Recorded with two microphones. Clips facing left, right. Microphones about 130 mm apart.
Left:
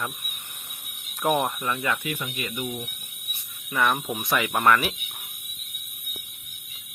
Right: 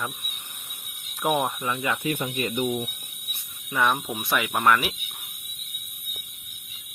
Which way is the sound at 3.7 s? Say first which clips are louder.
Even; 10° right (ahead or behind).